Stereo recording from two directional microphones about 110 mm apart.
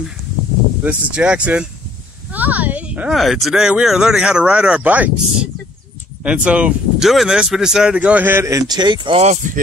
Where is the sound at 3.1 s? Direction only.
Centre (ahead or behind).